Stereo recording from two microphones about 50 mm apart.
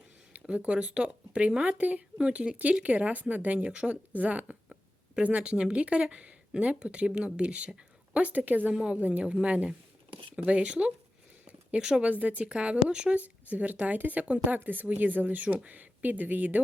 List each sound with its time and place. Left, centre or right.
0.3 s speech: right
8.7 s speech: centre
9.0 s speech: right; by 12.0 s centre
12.2 s speech: right
12.5 s speech: right